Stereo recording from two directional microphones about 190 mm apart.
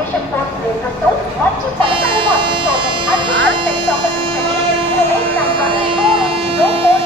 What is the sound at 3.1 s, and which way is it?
Dog, 25° right (ahead or behind).